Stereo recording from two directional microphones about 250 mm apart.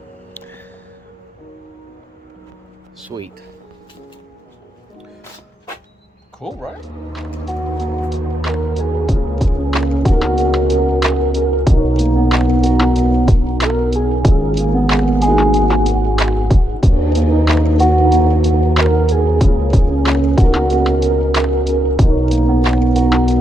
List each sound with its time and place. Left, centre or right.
3.1 s speech: centre
6.4 s music: centre